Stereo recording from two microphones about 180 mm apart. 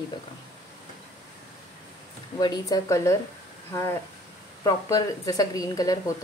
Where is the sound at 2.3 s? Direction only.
25° left (ahead or behind).